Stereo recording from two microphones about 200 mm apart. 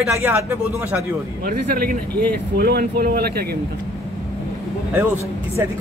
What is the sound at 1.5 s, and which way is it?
Speech, 45° right (ahead or behind).